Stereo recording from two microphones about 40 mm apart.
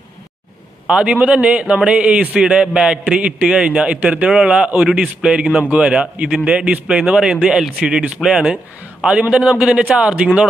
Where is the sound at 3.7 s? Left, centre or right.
Right.